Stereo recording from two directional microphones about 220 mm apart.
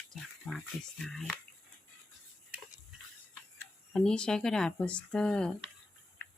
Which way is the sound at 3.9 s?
5° left (ahead or behind).